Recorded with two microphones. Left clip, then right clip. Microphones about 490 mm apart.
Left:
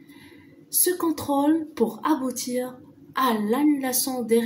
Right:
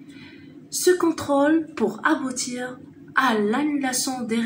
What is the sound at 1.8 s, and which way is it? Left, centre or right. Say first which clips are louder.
Speech: right 2 dB; left.